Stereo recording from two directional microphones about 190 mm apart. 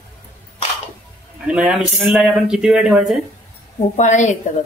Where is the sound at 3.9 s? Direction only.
40° left (ahead or behind).